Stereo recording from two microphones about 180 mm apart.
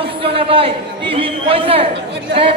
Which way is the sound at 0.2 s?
30° right (ahead or behind).